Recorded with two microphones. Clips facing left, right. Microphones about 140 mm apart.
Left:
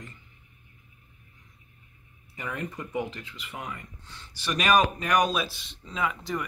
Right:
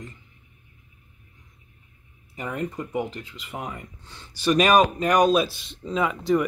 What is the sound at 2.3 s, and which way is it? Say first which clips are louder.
Speech: right 5 dB; 30° right (ahead or behind).